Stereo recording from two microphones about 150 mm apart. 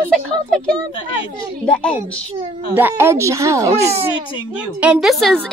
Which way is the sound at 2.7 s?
15° right (ahead or behind).